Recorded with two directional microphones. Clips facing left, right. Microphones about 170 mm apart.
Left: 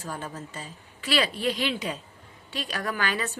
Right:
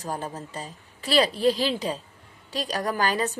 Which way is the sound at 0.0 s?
40° right (ahead or behind).